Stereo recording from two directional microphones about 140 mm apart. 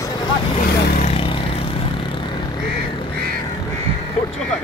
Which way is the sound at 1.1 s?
40° left (ahead or behind).